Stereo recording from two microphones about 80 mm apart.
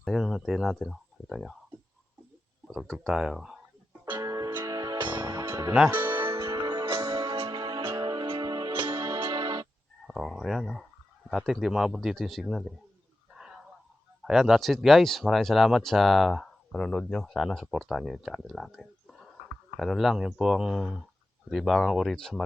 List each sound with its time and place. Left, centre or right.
0.0 s speech: centre
2.8 s speech: centre
4.2 s music: right
6.6 s music: right
7.8 s music: right
8.0 s music: right
9.0 s music: right
9.2 s music: right
10.1 s a sound: centre
11.3 s speech: centre
13.3 s a sound: centre
14.2 s speech: centre